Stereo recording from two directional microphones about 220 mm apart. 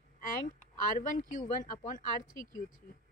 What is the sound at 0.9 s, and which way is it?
Speech, 35° left (ahead or behind).